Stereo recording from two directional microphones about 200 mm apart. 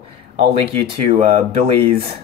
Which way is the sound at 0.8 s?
30° right (ahead or behind).